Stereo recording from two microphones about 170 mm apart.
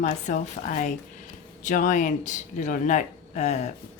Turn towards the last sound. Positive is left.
turn(degrees=40)  # may be behind; listen again after turning